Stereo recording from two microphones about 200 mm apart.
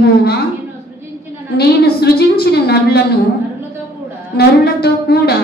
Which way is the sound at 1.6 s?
55° left (ahead or behind).